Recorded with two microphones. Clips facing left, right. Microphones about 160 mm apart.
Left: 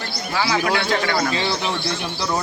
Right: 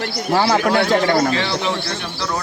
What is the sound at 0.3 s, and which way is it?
Speech, 45° right (ahead or behind).